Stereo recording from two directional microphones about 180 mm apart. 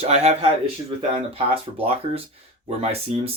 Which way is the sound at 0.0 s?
35° right (ahead or behind).